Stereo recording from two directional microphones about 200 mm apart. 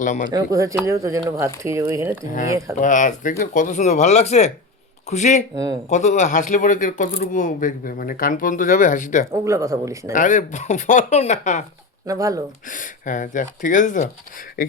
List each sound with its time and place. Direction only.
0.0 s speech: 40° left (ahead or behind)
0.3 s speech: 20° right (ahead or behind)
2.7 s speech: 40° left (ahead or behind)
9.3 s speech: 15° right (ahead or behind)
10.1 s speech: 40° left (ahead or behind)
12.0 s speech: 15° right (ahead or behind)
12.6 s speech: 40° left (ahead or behind)